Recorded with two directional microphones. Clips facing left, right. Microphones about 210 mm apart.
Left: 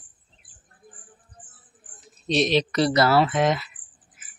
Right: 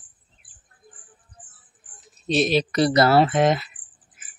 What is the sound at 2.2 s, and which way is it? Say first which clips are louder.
Speech: right 1 dB; 5° right (ahead or behind).